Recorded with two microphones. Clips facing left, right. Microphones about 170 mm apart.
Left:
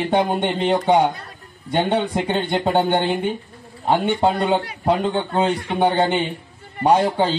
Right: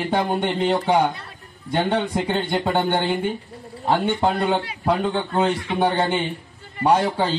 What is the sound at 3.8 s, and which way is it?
Speech, 20° left (ahead or behind).